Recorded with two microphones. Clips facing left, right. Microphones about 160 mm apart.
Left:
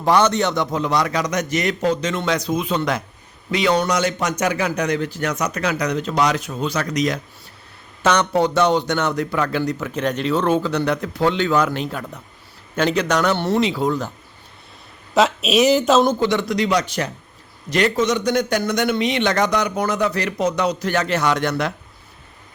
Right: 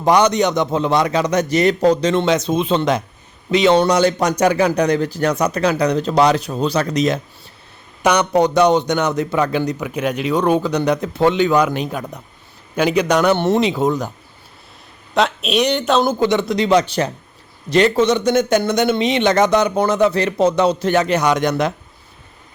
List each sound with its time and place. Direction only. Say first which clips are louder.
0.0 s speech: right 3 dB; 15° right (ahead or behind)
8.0 s a man's voice: right 3 dB; 15° right (ahead or behind)
15.1 s speech: left 1 dB; centre (ahead or behind)
16.2 s speech: right 3 dB; 20° right (ahead or behind)